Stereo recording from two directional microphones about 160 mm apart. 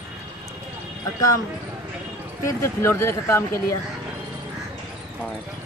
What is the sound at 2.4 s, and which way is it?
A woman's voice, 15° left (ahead or behind).